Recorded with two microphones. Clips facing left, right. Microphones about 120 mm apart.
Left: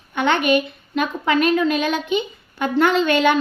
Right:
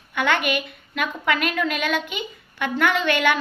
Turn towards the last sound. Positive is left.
turn(degrees=25)  # may be behind; listen again after turning